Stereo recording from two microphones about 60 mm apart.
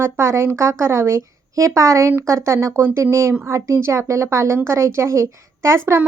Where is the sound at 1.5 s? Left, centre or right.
Right.